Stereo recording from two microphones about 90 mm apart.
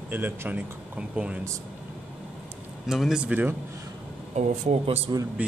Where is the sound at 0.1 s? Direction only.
20° right (ahead or behind).